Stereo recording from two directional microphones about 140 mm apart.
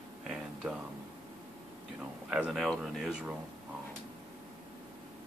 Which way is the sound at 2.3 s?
5° right (ahead or behind).